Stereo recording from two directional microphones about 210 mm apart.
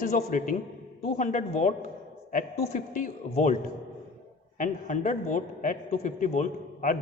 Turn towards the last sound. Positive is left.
turn(degrees=40)  # may be behind; listen again after turning